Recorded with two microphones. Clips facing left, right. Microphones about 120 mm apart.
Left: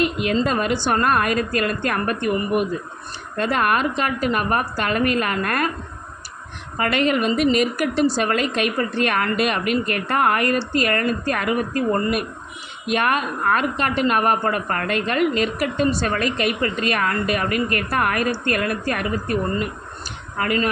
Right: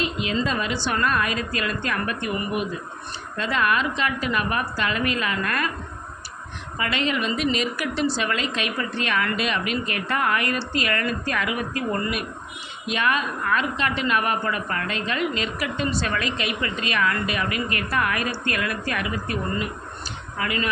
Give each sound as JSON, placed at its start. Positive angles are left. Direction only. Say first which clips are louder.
{"t": 0.0, "sound": "a sound", "louder": "left 6 dB", "side_deg": 55}
{"t": 0.4, "sound": "a woman's voice", "louder": "left 5 dB", "side_deg": 50}
{"t": 6.7, "sound": "a woman's voice", "louder": "left 6 dB", "side_deg": 50}
{"t": 12.9, "sound": "a woman's voice", "louder": "left 3 dB", "side_deg": 50}